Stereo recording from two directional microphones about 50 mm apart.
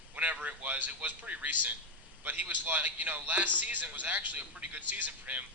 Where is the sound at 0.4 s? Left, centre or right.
Right.